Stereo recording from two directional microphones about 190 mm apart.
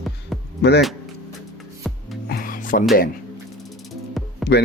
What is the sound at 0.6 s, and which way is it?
Speech, 60° left (ahead or behind).